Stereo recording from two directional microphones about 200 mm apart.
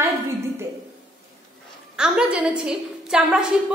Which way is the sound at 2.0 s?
5° right (ahead or behind).